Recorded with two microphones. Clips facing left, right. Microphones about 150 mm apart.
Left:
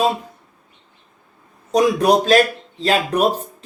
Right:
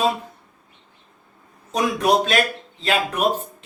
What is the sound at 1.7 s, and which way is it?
Speech, 35° left (ahead or behind).